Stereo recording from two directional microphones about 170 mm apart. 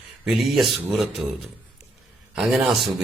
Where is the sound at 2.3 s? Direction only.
Centre (ahead or behind).